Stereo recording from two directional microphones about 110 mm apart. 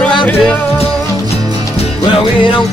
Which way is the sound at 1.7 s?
60° left (ahead or behind).